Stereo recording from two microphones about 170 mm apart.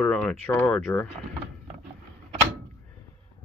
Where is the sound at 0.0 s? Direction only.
5° left (ahead or behind).